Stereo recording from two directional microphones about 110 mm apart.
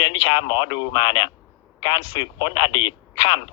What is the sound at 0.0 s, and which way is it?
Speech, 45° left (ahead or behind).